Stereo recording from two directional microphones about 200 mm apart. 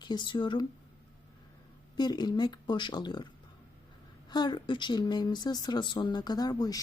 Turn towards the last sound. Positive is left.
turn(degrees=20)  # may be behind; listen again after turning